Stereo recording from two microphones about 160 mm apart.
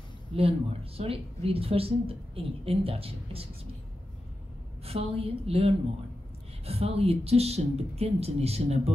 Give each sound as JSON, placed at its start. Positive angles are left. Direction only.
{"t": 0.3, "sound": "speech", "side_deg": -35}
{"t": 4.8, "sound": "speech", "side_deg": -40}